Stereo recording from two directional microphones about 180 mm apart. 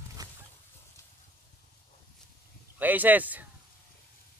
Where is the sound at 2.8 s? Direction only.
10° right (ahead or behind).